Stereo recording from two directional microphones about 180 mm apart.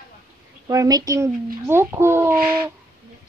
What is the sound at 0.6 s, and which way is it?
A woman's voice, 20° right (ahead or behind).